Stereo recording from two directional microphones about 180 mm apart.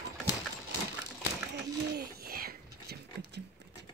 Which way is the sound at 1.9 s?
55° right (ahead or behind).